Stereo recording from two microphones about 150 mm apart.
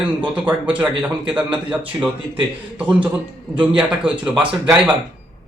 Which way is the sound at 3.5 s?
5° right (ahead or behind).